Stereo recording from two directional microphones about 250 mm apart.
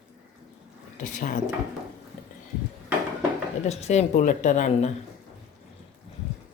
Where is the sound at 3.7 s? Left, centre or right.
Left.